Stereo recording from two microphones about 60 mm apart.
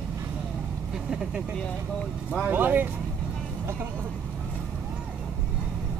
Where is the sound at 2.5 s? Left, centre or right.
Right.